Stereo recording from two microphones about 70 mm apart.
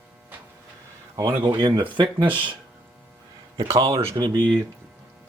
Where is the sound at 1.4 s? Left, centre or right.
Right.